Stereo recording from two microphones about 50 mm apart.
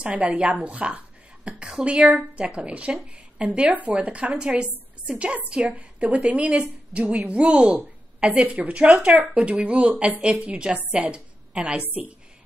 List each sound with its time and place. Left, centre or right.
0.0 s a woman's voice: right